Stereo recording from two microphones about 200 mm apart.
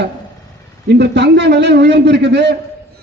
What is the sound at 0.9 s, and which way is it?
A man's voice, 60° right (ahead or behind).